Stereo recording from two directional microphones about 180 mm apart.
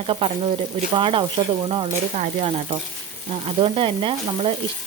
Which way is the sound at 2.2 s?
35° right (ahead or behind).